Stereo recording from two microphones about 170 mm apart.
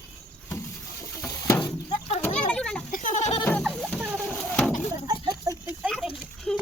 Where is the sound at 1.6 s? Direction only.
40° left (ahead or behind).